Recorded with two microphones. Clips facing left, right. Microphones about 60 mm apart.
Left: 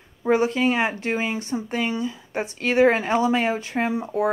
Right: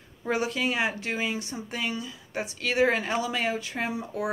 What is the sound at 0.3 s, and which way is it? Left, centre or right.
Speech, left.